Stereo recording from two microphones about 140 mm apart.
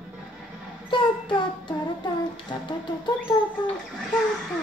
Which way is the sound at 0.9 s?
35° left (ahead or behind).